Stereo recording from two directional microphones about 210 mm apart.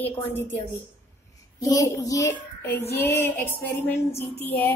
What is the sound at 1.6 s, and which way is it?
A child's voice, 15° left (ahead or behind).